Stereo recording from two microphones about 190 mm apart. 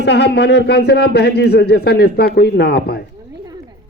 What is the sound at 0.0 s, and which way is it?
A man's voice, 60° left (ahead or behind).